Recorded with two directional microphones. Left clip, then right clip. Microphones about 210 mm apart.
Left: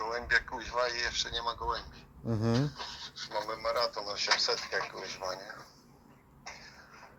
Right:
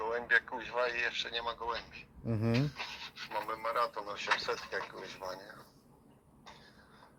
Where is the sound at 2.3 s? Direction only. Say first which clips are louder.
Left 3 dB; 10° left (ahead or behind).